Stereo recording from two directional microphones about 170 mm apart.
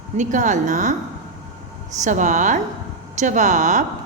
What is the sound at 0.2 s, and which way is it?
Speech, 45° right (ahead or behind).